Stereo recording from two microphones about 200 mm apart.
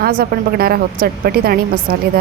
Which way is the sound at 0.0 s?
50° right (ahead or behind).